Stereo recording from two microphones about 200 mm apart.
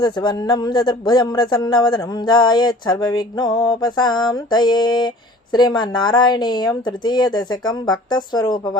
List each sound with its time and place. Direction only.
0.0 s speech: 20° left (ahead or behind)